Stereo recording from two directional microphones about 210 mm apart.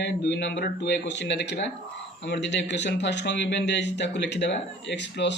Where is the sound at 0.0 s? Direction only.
55° left (ahead or behind).